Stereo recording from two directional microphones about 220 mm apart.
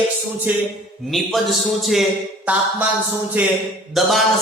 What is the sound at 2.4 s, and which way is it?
Speech, 5° right (ahead or behind).